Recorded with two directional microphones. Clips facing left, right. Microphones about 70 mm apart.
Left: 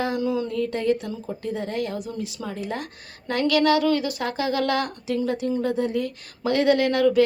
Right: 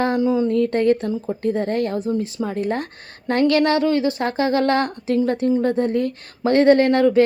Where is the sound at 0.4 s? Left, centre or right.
Right.